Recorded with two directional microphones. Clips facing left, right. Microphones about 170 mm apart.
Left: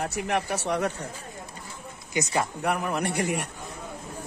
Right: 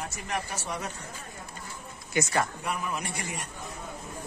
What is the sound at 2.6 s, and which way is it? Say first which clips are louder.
Speech: left 6 dB; 65° left (ahead or behind).